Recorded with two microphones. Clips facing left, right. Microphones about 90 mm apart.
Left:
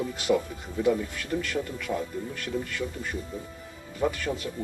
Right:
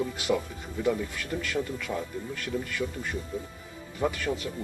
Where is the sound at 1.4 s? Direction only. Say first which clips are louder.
Even; 5° left (ahead or behind).